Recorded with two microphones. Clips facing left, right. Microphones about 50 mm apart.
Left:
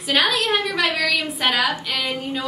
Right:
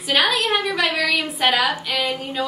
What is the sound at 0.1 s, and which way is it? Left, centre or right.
A woman's voice, centre.